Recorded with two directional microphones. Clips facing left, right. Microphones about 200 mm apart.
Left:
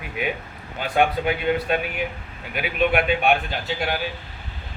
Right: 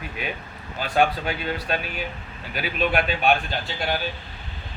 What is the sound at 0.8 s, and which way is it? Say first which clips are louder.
Speech: left 1 dB; 15° left (ahead or behind).